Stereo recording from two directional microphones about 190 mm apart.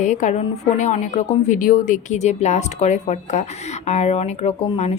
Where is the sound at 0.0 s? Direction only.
40° left (ahead or behind).